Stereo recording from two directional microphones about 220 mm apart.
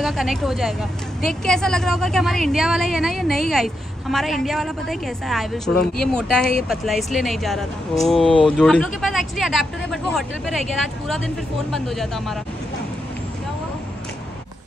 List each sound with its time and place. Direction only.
0.0 s a woman's voice: centre (ahead or behind)